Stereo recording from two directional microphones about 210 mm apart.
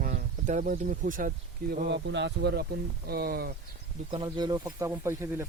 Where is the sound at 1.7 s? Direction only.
50° right (ahead or behind).